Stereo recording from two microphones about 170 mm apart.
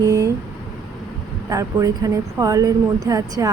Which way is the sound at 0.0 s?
20° right (ahead or behind).